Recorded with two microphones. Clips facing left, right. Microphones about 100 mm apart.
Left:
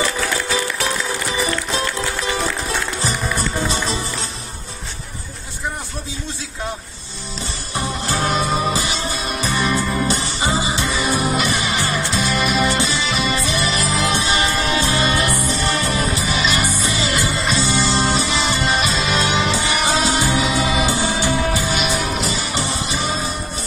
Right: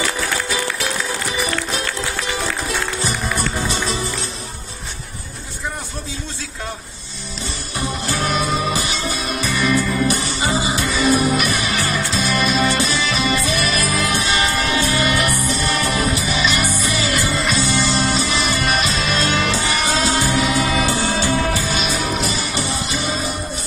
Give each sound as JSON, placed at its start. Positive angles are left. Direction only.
{"t": 7.7, "sound": "music", "side_deg": 30}